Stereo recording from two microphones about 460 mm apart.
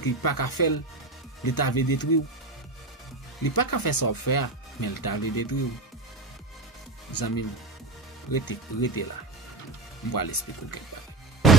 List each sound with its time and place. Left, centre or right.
0.0 s speech: left
3.4 s speech: left
7.1 s speech: left
10.1 s speech: left
11.4 s music: centre